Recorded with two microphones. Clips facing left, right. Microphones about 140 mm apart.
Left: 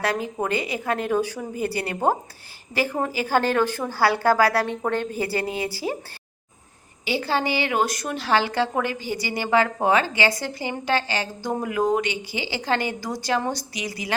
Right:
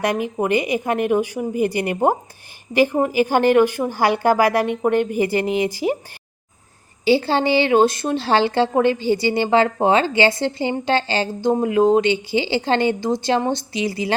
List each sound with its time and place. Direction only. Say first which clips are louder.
0.0 s speech: right 4 dB; 15° right (ahead or behind)
7.0 s a woman's voice: right 7 dB; 30° right (ahead or behind)